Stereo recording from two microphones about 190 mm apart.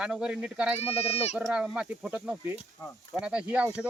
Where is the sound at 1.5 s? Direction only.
5° right (ahead or behind).